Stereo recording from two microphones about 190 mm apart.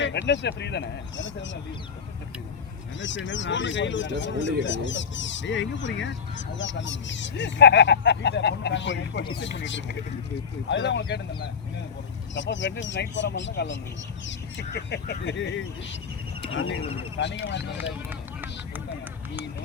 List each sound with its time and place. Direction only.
0.0 s speech: 70° left (ahead or behind)
3.2 s speech: 75° left (ahead or behind)
16.6 s speech: 90° left
17.2 s speech: 70° left (ahead or behind)
17.7 s speech: 10° right (ahead or behind)